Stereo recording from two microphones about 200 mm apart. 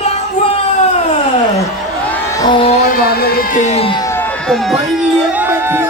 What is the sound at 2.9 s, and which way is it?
Music, 50° left (ahead or behind).